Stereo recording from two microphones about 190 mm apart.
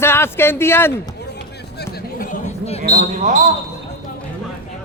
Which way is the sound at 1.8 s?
45° left (ahead or behind).